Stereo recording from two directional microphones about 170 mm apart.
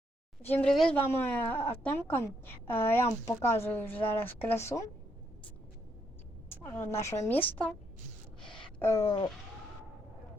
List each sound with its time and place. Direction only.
0.4 s speech: 5° left (ahead or behind)
6.5 s speech: 15° left (ahead or behind)
8.8 s speech: 20° left (ahead or behind)